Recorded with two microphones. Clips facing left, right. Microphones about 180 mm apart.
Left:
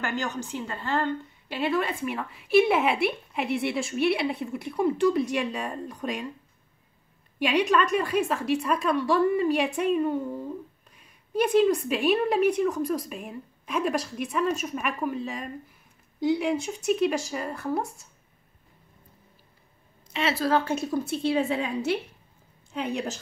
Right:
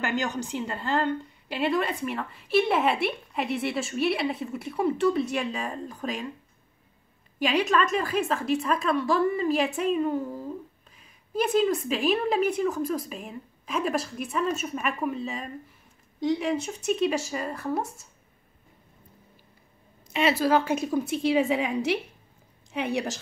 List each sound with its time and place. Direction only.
0.6 s a woman's voice: centre (ahead or behind)
7.3 s a woman's voice: centre (ahead or behind)
20.1 s a woman's voice: 15° right (ahead or behind)
22.8 s a woman's voice: 70° right (ahead or behind)